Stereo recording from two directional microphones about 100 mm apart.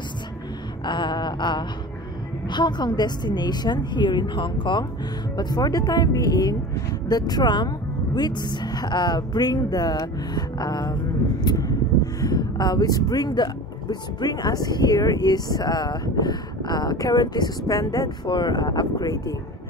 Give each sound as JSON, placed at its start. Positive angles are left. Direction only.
{"t": 0.8, "sound": "speech", "side_deg": 50}